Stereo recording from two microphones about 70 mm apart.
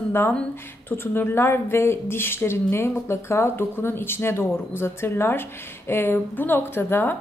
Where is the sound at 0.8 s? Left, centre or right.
Left.